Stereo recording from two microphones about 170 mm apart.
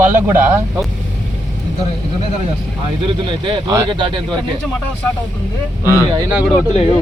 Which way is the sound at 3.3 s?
30° right (ahead or behind).